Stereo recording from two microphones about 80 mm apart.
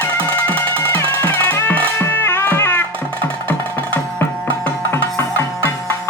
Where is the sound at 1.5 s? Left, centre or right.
Left.